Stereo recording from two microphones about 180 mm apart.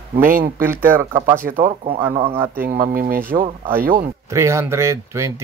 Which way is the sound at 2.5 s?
55° right (ahead or behind).